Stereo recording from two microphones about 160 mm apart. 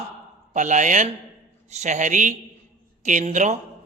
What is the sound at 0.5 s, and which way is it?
A man's voice, 50° right (ahead or behind).